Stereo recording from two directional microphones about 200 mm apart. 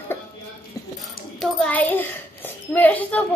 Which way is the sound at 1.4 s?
5° left (ahead or behind).